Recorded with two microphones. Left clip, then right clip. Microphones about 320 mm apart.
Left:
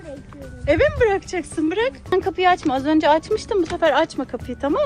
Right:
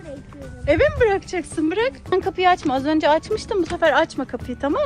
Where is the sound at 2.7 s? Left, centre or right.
Right.